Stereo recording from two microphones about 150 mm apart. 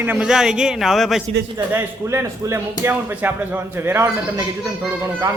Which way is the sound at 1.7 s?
15° right (ahead or behind).